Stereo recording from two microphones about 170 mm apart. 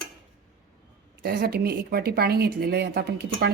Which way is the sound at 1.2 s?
70° right (ahead or behind).